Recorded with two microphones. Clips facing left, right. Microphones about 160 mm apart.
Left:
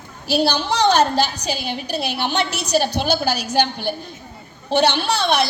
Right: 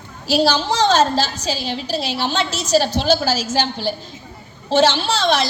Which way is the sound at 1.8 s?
55° left (ahead or behind).